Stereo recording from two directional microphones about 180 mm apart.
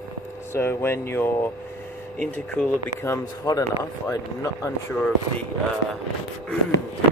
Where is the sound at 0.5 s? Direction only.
15° left (ahead or behind).